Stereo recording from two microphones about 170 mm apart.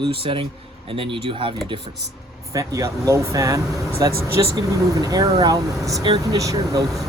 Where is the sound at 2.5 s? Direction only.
20° right (ahead or behind).